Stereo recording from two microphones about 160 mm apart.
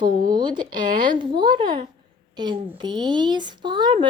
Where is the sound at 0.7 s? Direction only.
60° right (ahead or behind).